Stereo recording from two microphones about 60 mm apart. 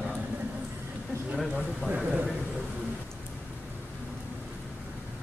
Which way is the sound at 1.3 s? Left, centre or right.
Centre.